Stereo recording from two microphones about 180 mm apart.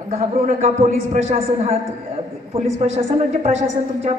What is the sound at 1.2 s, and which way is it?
A woman's voice, 35° right (ahead or behind).